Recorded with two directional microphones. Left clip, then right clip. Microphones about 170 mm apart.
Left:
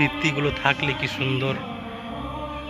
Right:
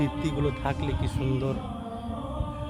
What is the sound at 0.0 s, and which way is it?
Speech, 20° right (ahead or behind).